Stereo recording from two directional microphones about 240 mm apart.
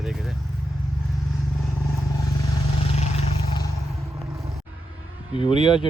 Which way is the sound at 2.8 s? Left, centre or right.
Left.